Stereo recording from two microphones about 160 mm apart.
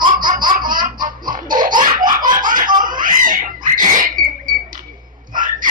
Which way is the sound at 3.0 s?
55° right (ahead or behind).